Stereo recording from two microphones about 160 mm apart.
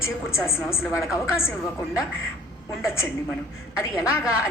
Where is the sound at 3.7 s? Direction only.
5° right (ahead or behind).